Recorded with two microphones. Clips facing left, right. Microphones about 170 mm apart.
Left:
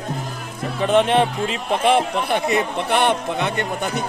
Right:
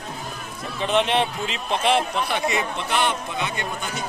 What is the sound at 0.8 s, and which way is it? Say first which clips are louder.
A man's voice: left 5 dB; 50° left (ahead or behind).